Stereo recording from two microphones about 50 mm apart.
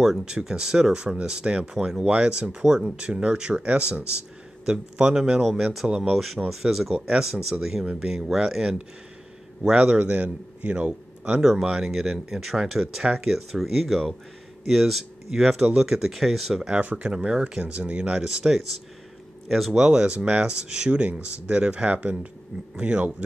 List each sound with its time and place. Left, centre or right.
0.2 s speech: centre
5.4 s speech: centre
5.9 s speech: centre
6.1 s a man's voice: centre
9.8 s speech: right
11.4 s speech: centre
16.8 s speech: right
19.4 s speech: centre; by 23.1 s right